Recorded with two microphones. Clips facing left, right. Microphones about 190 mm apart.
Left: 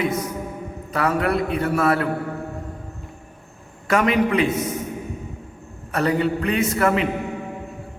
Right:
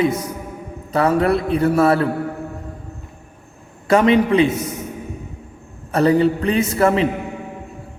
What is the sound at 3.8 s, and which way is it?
Speech, 30° right (ahead or behind).